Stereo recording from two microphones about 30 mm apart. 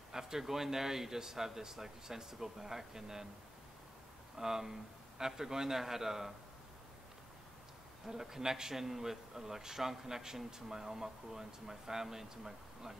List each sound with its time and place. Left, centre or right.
0.1 s a man's voice: centre
4.4 s a man's voice: centre
8.1 s a man's voice: centre